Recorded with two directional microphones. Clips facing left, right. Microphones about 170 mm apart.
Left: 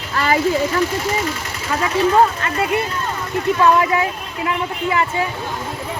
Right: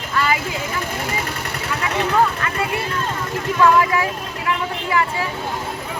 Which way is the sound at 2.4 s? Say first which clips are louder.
Left 1 dB; 25° left (ahead or behind).